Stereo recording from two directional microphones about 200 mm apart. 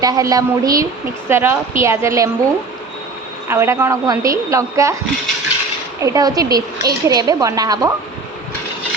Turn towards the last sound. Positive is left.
turn(degrees=-20)  # may be behind; listen again after turning